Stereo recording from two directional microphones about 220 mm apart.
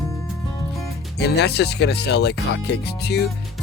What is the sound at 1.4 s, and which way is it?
Speech, 50° left (ahead or behind).